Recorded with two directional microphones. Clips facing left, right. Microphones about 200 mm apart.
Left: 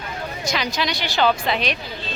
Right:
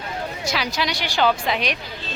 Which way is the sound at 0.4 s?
5° right (ahead or behind).